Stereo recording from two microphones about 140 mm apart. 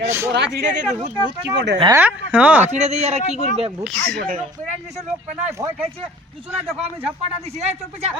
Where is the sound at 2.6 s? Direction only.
55° right (ahead or behind).